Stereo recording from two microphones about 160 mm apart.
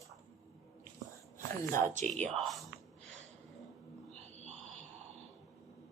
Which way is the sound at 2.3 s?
Centre (ahead or behind).